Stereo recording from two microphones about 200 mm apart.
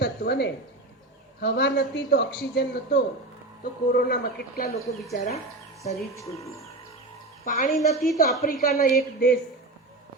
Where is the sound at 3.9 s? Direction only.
45° left (ahead or behind).